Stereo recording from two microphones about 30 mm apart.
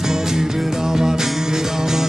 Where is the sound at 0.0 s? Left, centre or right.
Centre.